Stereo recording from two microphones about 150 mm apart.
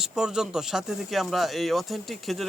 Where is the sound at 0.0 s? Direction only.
5° right (ahead or behind).